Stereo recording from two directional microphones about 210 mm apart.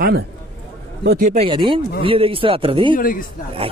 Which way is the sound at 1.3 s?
25° right (ahead or behind).